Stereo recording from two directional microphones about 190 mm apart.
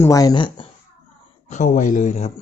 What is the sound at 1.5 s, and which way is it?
Speech, 40° left (ahead or behind).